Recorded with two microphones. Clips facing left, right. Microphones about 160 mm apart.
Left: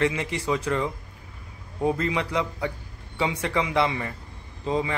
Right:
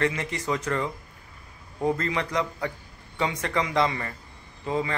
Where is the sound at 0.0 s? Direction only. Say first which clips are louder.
Left 2 dB; 15° left (ahead or behind).